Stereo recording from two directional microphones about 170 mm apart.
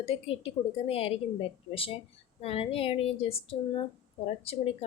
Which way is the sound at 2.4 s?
35° left (ahead or behind).